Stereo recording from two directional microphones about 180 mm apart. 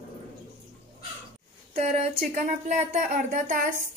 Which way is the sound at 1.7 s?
35° right (ahead or behind).